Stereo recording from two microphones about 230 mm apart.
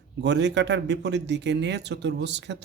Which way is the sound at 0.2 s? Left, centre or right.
Right.